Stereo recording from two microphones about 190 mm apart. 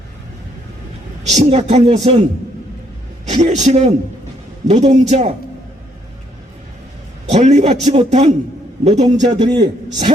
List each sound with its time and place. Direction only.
1.4 s a man's voice: 30° right (ahead or behind)
3.4 s a man's voice: 40° right (ahead or behind)
7.3 s a man's voice: 35° right (ahead or behind)
9.4 s a man's voice: 20° right (ahead or behind)